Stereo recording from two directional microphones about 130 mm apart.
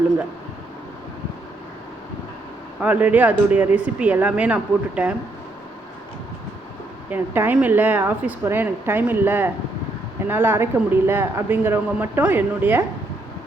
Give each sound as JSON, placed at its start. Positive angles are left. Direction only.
{"t": 2.8, "sound": "speech", "side_deg": -10}
{"t": 7.1, "sound": "speech", "side_deg": -15}